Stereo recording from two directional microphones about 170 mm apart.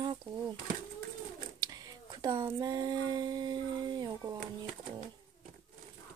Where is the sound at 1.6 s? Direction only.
20° right (ahead or behind).